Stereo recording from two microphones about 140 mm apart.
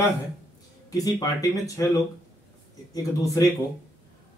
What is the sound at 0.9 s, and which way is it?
Speech, 25° left (ahead or behind).